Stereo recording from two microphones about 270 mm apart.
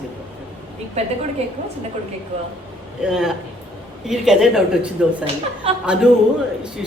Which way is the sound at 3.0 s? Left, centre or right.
Centre.